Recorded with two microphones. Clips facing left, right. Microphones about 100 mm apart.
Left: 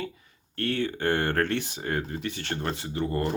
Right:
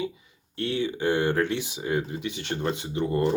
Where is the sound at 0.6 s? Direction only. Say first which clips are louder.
Right 1 dB; 55° left (ahead or behind).